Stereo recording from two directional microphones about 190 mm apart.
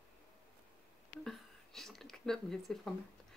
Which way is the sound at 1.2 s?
Centre (ahead or behind).